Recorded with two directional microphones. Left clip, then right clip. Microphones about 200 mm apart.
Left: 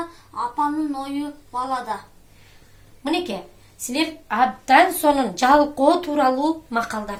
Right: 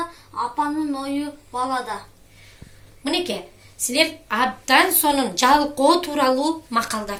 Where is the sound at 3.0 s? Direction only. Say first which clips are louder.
Even; 50° left (ahead or behind).